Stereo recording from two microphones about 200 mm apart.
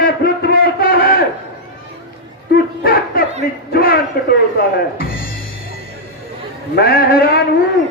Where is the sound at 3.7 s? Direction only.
50° left (ahead or behind).